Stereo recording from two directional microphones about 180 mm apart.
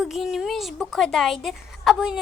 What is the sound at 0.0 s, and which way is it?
A woman's voice, centre (ahead or behind).